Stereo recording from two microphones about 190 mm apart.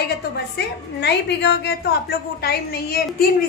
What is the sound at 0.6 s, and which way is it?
A woman's voice, 60° left (ahead or behind).